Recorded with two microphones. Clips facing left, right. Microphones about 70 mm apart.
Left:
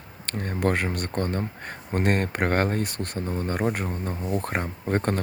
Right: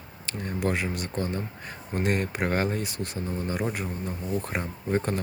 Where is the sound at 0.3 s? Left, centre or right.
Left.